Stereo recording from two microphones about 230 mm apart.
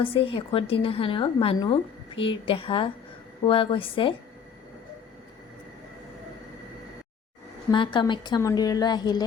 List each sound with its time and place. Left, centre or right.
0.0 s a woman's voice: left
7.7 s a woman's voice: centre